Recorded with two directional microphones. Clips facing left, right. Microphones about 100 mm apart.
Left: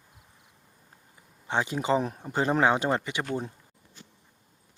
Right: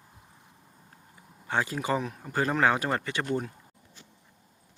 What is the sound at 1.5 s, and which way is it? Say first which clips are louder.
Speech: left 2 dB; 20° left (ahead or behind).